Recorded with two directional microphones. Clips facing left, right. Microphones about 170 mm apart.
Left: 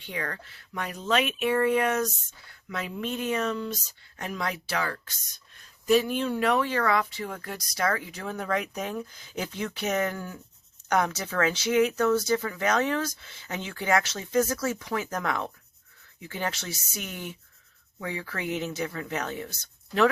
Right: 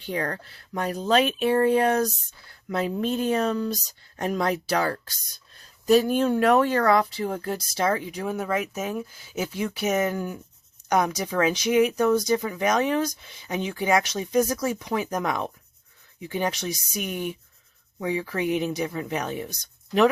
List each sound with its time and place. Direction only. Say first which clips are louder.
0.0 s speech: right 6 dB; 35° right (ahead or behind); by 20.1 s 15° right (ahead or behind)